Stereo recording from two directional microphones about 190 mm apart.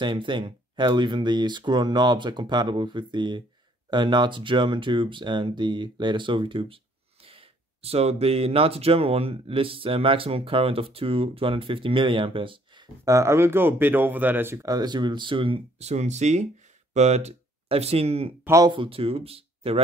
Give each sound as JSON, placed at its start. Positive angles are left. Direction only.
{"t": 0.0, "sound": "speech", "side_deg": -25}
{"t": 18.4, "sound": "speech", "side_deg": -15}